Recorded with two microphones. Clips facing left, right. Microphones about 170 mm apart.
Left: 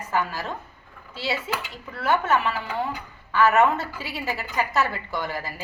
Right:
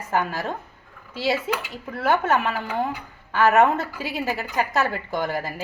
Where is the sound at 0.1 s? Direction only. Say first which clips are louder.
Right 2 dB; 50° right (ahead or behind).